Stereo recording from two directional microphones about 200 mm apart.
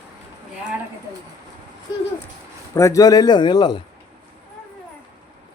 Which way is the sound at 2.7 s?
15° left (ahead or behind).